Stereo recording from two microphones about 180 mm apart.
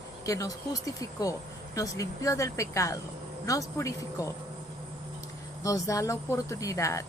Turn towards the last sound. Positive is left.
turn(degrees=15)  # may be behind; listen again after turning